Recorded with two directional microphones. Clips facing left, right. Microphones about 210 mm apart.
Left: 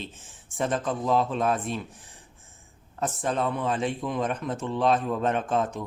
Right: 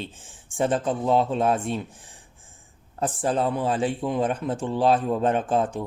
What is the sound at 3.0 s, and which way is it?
Speech, 30° right (ahead or behind).